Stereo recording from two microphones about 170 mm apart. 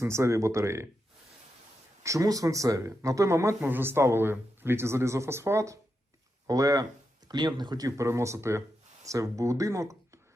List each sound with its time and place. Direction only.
0.0 s speech: 15° right (ahead or behind)
2.0 s speech: 20° right (ahead or behind)